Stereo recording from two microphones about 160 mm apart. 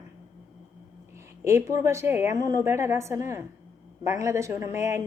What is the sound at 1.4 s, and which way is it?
A woman's voice, 15° right (ahead or behind).